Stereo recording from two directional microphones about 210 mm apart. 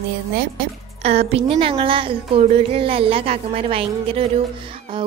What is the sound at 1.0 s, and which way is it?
A woman's voice, 30° right (ahead or behind).